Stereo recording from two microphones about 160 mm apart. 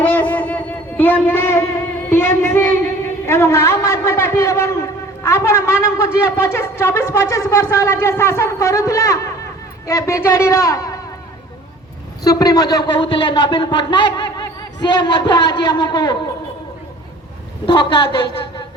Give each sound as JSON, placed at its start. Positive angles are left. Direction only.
{"t": 0.0, "sound": "a sound", "side_deg": 10}
{"t": 2.0, "sound": "music", "side_deg": 15}
{"t": 3.2, "sound": "a man's voice", "side_deg": 15}
{"t": 12.2, "sound": "a man's voice", "side_deg": 20}
{"t": 17.7, "sound": "a man's voice", "side_deg": 30}